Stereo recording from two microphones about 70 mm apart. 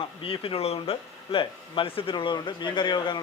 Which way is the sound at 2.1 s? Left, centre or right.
Left.